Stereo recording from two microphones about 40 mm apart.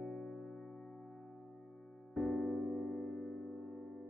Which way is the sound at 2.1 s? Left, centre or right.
Centre.